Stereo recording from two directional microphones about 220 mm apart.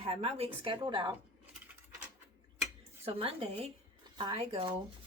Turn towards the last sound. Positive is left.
turn(degrees=-25)  # may be behind; listen again after turning